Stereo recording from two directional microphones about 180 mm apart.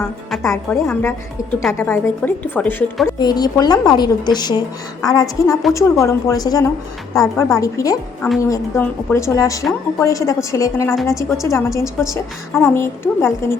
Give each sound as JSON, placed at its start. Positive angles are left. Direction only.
{"t": 0.4, "sound": "speech", "side_deg": 10}
{"t": 3.2, "sound": "a woman's voice", "side_deg": 20}